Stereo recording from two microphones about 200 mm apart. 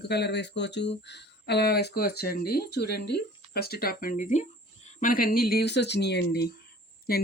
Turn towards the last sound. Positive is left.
turn(degrees=50)  # may be behind; listen again after turning